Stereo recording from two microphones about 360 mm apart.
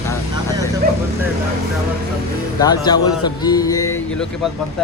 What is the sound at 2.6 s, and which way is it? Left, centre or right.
Music, centre.